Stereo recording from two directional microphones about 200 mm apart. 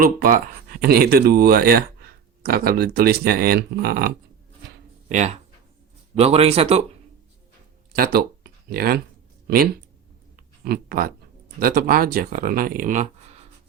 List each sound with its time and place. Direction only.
0.0 s speech: 45° right (ahead or behind)
5.0 s speech: 35° right (ahead or behind)
7.9 s a sound: 50° right (ahead or behind)
10.7 s speech: 45° right (ahead or behind)